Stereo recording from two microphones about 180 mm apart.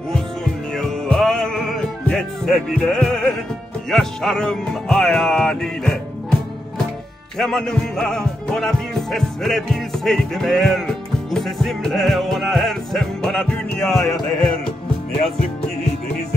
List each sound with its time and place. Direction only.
0.7 s music: 5° left (ahead or behind)
7.3 s music: centre (ahead or behind)
13.9 s a sound: 20° left (ahead or behind)